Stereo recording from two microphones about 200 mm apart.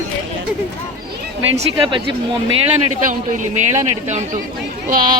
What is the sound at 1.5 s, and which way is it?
Speech, 25° right (ahead or behind).